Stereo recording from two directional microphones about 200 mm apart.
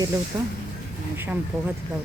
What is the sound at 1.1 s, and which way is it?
Speech, 10° right (ahead or behind).